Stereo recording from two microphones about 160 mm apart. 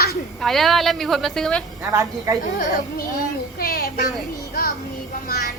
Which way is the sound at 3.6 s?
70° left (ahead or behind).